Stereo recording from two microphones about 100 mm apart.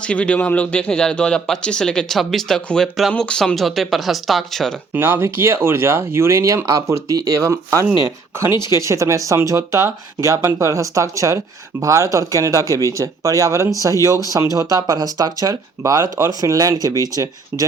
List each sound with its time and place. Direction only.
0.0 s speech: 10° left (ahead or behind)
4.9 s speech: 20° right (ahead or behind)